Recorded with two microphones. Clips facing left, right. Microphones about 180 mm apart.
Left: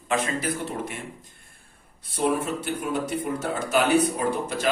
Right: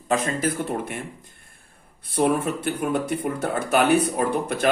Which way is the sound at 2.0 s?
55° right (ahead or behind).